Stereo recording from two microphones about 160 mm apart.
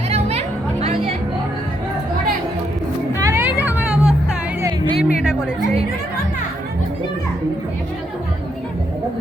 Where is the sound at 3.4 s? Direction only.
10° right (ahead or behind).